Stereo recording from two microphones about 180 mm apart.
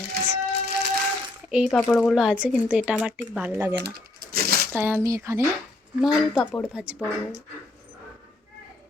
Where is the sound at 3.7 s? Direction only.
65° right (ahead or behind).